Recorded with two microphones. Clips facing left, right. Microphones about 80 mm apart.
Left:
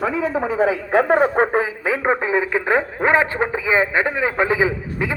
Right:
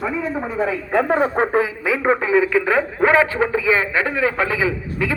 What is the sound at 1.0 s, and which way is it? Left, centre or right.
Speech, centre.